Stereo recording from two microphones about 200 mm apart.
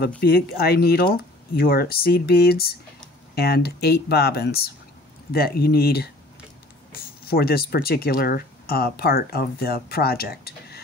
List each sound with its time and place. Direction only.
0.2 s speech: 50° left (ahead or behind)
7.2 s speech: 50° left (ahead or behind)